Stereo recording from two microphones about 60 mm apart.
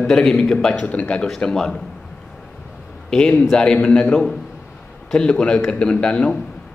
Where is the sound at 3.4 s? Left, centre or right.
Centre.